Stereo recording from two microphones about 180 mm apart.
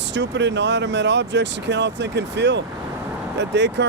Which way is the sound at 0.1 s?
80° right.